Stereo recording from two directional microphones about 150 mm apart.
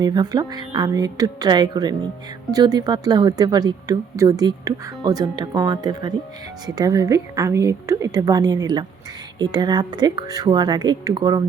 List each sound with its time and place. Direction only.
0.0 s speech: 30° right (ahead or behind)